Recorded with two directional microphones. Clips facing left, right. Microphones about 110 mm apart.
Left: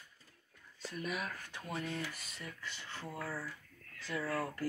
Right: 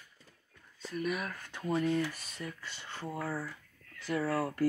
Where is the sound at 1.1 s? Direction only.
45° right (ahead or behind).